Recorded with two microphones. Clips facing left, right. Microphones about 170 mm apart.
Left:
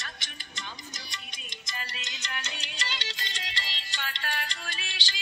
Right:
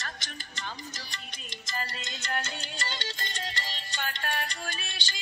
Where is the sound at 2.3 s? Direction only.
50° right (ahead or behind).